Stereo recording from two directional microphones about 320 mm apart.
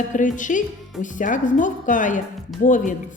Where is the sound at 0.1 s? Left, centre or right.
Left.